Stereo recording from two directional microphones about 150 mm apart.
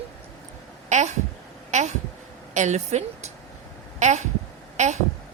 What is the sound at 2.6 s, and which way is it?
A woman's voice, 50° right (ahead or behind).